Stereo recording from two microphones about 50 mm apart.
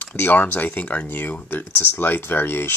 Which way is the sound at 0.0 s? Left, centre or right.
Left.